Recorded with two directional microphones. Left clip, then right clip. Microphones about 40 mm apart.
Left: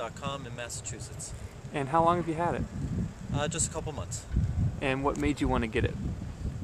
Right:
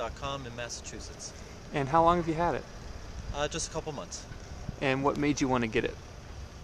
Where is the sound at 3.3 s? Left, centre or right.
Centre.